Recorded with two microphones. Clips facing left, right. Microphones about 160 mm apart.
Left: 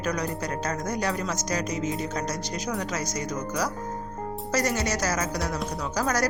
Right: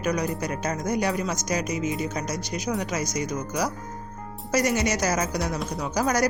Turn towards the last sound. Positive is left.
turn(degrees=-15)  # may be behind; listen again after turning